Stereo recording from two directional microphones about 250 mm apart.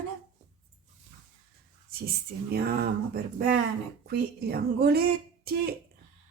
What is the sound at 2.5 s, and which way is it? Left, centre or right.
Speech, right.